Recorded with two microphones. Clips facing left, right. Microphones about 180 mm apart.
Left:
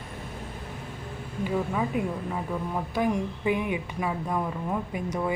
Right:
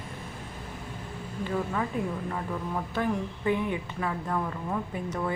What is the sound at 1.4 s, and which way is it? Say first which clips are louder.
A woman's voice: left 2 dB; 10° left (ahead or behind).